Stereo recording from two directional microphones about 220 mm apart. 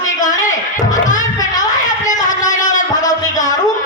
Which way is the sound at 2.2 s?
35° left (ahead or behind).